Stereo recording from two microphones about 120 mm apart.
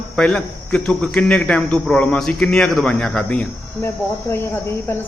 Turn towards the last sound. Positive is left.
turn(degrees=20)  # may be behind; listen again after turning